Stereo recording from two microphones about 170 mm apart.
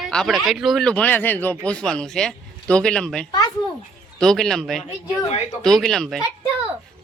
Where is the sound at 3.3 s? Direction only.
25° left (ahead or behind).